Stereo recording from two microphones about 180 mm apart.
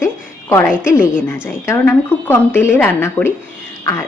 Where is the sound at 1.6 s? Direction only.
15° left (ahead or behind).